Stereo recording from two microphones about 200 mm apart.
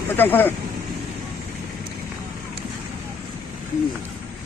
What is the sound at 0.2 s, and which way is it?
Speech, 10° left (ahead or behind).